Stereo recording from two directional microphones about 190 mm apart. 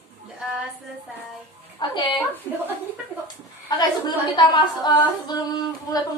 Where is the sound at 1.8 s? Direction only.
25° left (ahead or behind).